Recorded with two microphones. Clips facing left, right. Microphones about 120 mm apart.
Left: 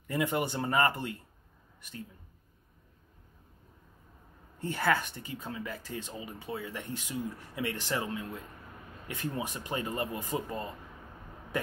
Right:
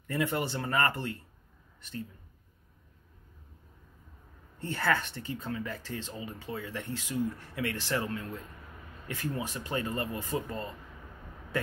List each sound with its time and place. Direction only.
0.0 s speech: 15° left (ahead or behind)
4.6 s speech: 15° left (ahead or behind)